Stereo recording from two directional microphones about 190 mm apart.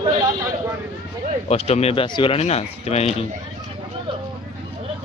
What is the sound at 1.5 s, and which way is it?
Speech, 35° left (ahead or behind).